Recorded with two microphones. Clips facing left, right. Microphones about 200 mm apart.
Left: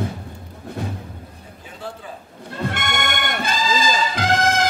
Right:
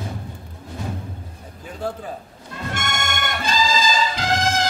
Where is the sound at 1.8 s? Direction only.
45° right (ahead or behind).